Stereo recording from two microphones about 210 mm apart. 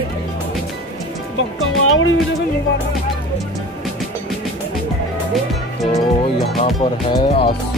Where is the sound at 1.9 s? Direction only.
70° left (ahead or behind).